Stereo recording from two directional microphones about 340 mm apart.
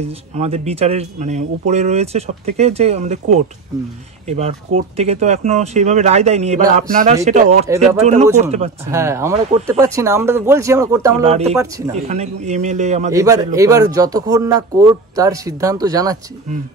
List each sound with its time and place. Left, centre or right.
0.3 s speech: centre
7.6 s speech: centre
8.4 s speech: centre
8.9 s speech: centre
11.9 s speech: centre
13.1 s speech: centre